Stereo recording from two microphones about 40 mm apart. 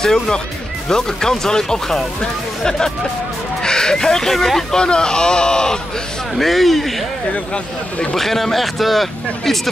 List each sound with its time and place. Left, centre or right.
0.0 s speech: centre
4.7 s speech: left
6.3 s speech: centre
8.1 s speech: centre